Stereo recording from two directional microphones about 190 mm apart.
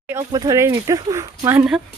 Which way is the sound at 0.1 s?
15° right (ahead or behind).